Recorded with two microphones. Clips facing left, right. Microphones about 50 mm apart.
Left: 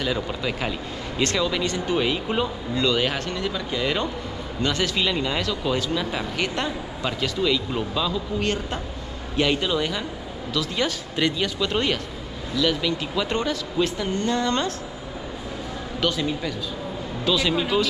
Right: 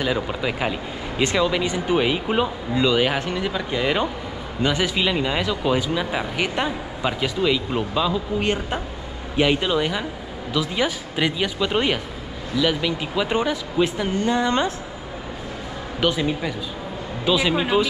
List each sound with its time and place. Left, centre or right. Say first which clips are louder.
0.0 s speech: right 3 dB; centre
16.0 s speech: right 3 dB; centre